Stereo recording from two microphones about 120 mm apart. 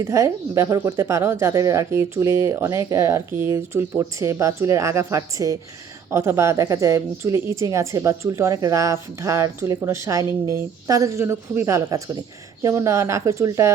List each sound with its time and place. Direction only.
0.0 s speech: 25° right (ahead or behind)